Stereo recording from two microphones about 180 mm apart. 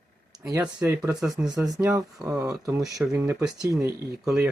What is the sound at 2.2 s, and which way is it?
Speech, 20° right (ahead or behind).